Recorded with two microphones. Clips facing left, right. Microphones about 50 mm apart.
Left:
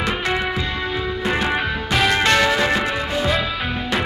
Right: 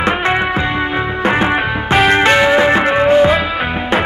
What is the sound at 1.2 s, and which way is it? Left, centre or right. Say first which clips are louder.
Music: right 7 dB; right.